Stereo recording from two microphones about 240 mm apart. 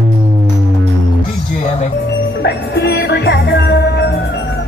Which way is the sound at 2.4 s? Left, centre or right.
Left.